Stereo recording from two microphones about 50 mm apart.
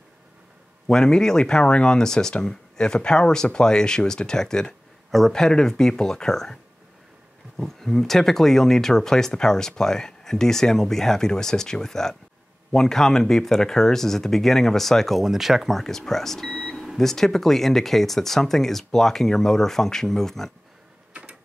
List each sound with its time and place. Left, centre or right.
0.8 s speech: centre
15.2 s speech: centre
15.8 s speech: centre
21.1 s a sound: right